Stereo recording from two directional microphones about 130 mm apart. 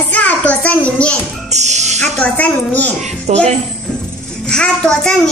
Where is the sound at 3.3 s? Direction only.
60° right (ahead or behind).